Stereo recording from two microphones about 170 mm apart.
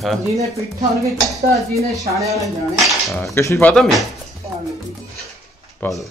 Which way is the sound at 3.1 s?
Centre (ahead or behind).